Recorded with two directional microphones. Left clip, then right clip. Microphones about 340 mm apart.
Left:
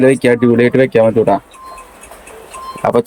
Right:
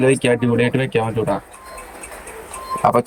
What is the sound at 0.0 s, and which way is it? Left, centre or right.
Speech, centre.